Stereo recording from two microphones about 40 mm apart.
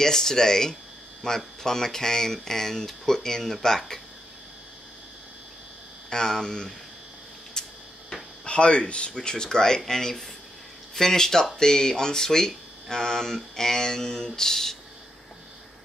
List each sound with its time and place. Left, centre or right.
0.0 s speech: centre
6.0 s speech: centre
7.6 s a sound: centre
8.5 s speech: left; by 14.8 s centre